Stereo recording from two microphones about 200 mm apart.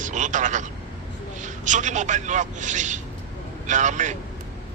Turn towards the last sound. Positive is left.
turn(degrees=-35)  # may be behind; listen again after turning